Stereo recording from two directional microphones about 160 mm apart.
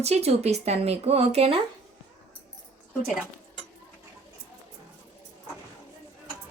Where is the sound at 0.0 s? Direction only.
40° right (ahead or behind).